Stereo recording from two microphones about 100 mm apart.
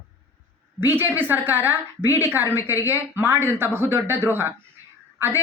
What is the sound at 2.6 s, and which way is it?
Speech, 30° left (ahead or behind).